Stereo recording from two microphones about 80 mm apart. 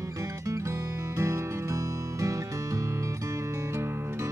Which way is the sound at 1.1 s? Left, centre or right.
Right.